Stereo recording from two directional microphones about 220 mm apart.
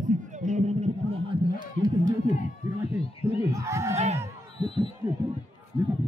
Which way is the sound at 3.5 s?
15° right (ahead or behind).